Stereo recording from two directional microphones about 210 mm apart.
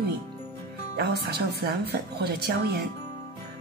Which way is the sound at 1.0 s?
50° right (ahead or behind).